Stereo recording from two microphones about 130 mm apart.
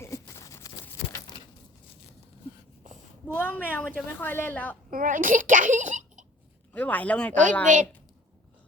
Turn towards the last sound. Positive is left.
turn(degrees=-75)  # may be behind; listen again after turning